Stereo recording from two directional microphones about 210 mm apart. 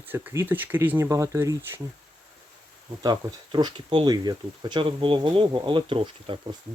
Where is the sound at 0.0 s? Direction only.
10° right (ahead or behind).